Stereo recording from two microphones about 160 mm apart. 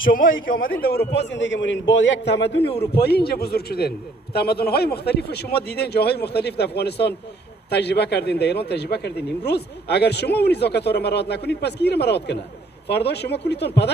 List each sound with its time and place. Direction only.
0.0 s a man's voice: 60° left (ahead or behind); by 13.9 s 90° left